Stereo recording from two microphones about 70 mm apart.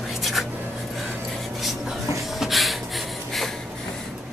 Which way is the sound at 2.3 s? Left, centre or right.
Centre.